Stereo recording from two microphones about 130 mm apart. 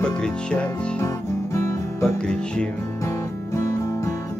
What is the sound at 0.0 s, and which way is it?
Music, 5° left (ahead or behind).